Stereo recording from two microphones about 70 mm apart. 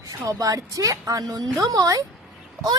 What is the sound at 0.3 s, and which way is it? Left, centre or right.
A woman's voice, right.